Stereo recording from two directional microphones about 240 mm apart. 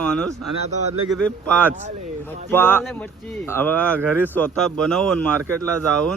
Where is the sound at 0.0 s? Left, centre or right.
Centre.